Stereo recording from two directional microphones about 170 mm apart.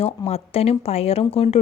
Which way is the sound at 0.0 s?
40° left (ahead or behind).